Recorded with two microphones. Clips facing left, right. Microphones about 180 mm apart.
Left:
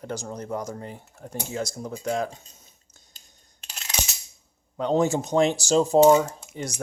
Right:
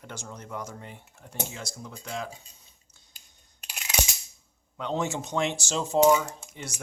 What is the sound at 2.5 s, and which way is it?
Drip, 45° left (ahead or behind).